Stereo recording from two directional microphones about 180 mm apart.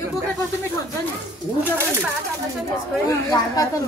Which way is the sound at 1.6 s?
10° right (ahead or behind).